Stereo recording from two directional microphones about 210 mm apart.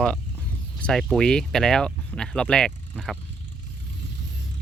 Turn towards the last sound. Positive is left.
turn(degrees=0)  # may be behind; listen again after turning